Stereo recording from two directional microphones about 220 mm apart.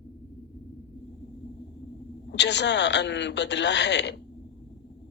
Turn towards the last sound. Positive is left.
turn(degrees=50)  # may be behind; listen again after turning